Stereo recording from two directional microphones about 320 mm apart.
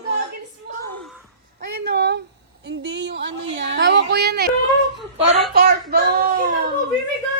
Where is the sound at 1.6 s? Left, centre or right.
Right.